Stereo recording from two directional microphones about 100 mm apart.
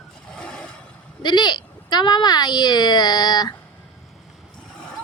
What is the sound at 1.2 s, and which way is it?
Speech, 50° left (ahead or behind).